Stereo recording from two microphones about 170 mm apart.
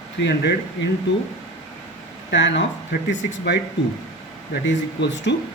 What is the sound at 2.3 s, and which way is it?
Speech, 90° left.